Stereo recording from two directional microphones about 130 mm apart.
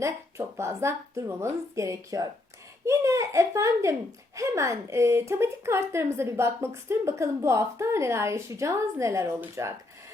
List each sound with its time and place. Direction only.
0.0 s a woman's voice: 20° right (ahead or behind)